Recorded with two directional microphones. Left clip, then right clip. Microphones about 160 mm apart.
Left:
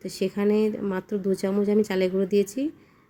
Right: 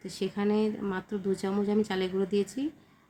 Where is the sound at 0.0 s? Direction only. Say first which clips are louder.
Left 6 dB; 25° left (ahead or behind).